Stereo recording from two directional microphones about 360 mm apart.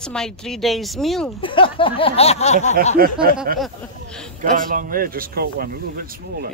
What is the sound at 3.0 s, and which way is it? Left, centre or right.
Speech, right.